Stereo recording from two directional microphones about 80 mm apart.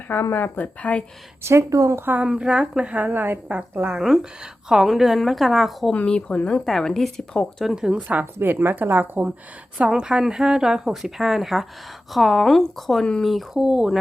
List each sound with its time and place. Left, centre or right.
0.1 s speech: left
1.5 s speech: right
2.2 s a woman's voice: centre
5.9 s a woman's voice: centre
7.7 s speech: centre
8.0 s speech: right
9.7 s a woman's voice: centre
13.3 s a woman's voice: centre